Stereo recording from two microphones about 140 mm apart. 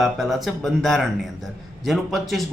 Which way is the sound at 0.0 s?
Centre (ahead or behind).